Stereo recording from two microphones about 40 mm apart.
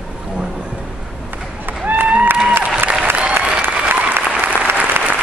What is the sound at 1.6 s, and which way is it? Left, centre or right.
Run, right.